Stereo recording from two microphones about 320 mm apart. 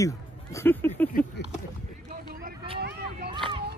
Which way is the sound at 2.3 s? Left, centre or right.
Right.